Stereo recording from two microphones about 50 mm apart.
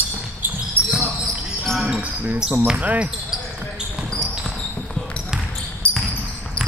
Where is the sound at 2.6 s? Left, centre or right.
Right.